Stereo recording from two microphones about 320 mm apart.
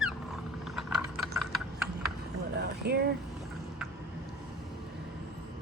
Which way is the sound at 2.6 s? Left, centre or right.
Right.